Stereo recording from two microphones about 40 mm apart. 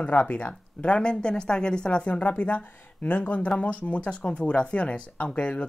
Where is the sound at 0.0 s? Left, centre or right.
Left.